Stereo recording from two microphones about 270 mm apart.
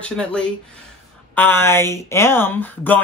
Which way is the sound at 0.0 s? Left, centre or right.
Centre.